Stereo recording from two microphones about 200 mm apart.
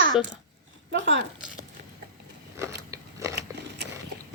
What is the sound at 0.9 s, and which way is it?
Speech, 65° right (ahead or behind).